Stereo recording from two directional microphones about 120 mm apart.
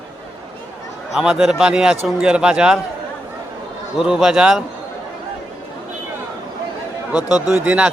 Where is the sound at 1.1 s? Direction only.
5° right (ahead or behind).